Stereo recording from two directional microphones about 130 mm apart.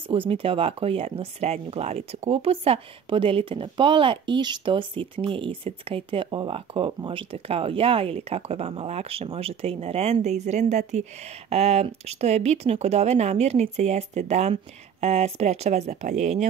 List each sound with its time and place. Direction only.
0.1 s speech: 45° right (ahead or behind); by 11.1 s 65° right (ahead or behind)
11.5 s speech: 50° right (ahead or behind)